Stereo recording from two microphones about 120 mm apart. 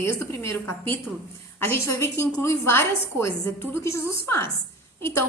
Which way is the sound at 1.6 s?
20° left (ahead or behind).